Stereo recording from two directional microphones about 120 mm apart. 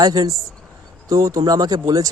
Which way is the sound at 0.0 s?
30° right (ahead or behind).